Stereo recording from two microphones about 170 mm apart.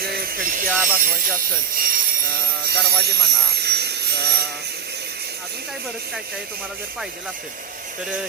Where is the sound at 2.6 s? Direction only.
70° right (ahead or behind).